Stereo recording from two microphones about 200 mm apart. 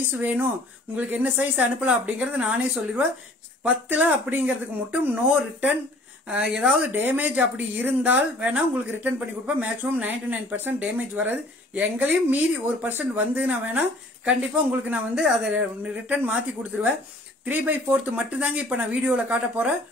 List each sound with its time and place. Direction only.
0.1 s speech: 5° right (ahead or behind)
9.6 s speech: 10° right (ahead or behind)